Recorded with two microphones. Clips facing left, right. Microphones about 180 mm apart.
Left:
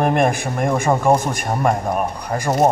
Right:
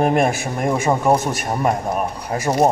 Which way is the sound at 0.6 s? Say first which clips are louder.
Left 1 dB; 5° right (ahead or behind).